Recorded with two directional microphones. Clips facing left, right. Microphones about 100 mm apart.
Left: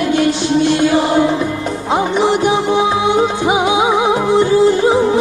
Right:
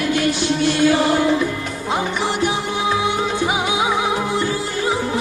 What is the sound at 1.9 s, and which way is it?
Music, 20° left (ahead or behind).